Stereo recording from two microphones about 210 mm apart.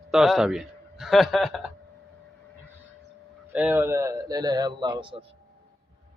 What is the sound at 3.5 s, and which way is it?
A man's voice, 10° right (ahead or behind).